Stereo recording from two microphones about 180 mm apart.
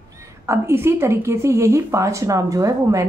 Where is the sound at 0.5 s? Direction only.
15° right (ahead or behind).